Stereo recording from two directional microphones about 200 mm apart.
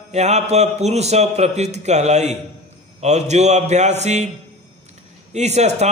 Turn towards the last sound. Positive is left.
turn(degrees=-35)  # may be behind; listen again after turning